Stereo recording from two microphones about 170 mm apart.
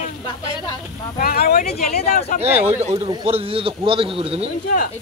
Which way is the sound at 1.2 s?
65° left (ahead or behind).